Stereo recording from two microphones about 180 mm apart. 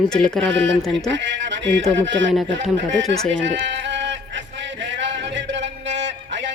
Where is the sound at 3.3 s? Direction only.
85° right.